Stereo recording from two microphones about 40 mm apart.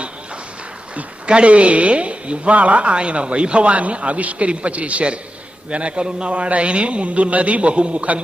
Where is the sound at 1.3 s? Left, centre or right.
Right.